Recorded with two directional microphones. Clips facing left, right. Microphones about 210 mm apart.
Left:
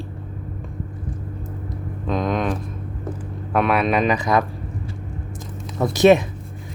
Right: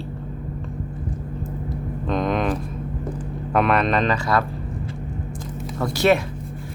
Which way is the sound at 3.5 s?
5° left (ahead or behind).